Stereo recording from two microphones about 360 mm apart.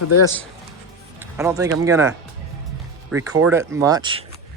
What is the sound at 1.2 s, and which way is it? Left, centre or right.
Speech, centre.